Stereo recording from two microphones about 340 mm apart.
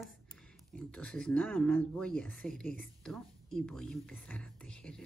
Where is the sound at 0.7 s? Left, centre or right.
Centre.